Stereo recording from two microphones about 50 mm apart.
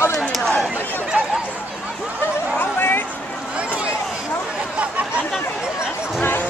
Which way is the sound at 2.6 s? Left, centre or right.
Left.